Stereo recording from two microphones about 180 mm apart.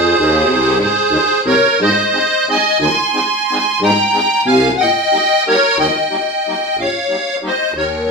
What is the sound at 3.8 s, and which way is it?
Music, 5° right (ahead or behind).